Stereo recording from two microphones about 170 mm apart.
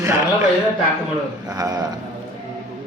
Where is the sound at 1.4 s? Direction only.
20° right (ahead or behind).